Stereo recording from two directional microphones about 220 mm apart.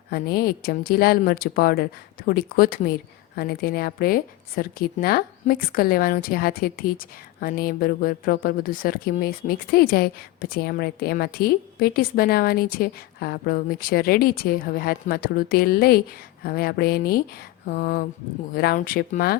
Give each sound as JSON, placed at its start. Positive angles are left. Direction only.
{"t": 0.1, "sound": "a woman's voice", "side_deg": 45}
{"t": 17.7, "sound": "a sound", "side_deg": 40}
{"t": 18.5, "sound": "a woman's voice", "side_deg": 45}